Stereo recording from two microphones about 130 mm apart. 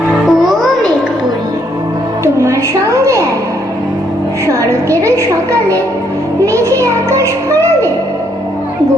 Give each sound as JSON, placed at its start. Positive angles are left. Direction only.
{"t": 0.3, "sound": "music", "side_deg": 0}
{"t": 2.2, "sound": "music", "side_deg": -20}
{"t": 4.4, "sound": "a woman's voice", "side_deg": -25}
{"t": 6.4, "sound": "music", "side_deg": -25}